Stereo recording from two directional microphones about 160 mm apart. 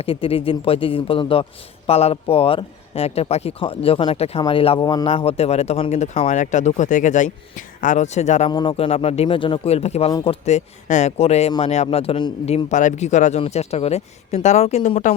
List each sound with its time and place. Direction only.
0.0 s speech: 35° left (ahead or behind)
8.4 s speech: 30° left (ahead or behind)
12.6 s speech: 50° left (ahead or behind)